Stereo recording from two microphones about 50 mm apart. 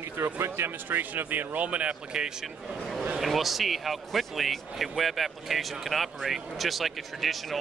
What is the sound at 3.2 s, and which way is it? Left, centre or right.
Speech, centre.